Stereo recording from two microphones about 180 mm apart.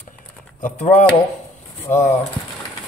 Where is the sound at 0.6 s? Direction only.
45° left (ahead or behind).